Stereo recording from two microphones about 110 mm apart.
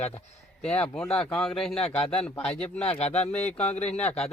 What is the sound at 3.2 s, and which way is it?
Speech, 90° left.